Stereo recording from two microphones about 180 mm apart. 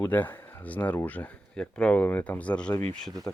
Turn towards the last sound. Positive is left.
turn(degrees=5)  # may be behind; listen again after turning